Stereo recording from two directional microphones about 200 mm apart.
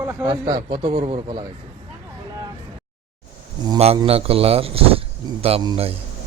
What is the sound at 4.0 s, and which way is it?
A man's voice, 30° right (ahead or behind).